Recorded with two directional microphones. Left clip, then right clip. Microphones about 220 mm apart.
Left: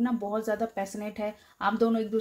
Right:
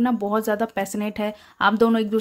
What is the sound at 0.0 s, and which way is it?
A woman's voice, 35° right (ahead or behind).